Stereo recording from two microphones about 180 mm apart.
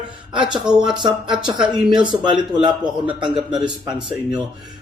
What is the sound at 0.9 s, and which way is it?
Speech, 25° right (ahead or behind).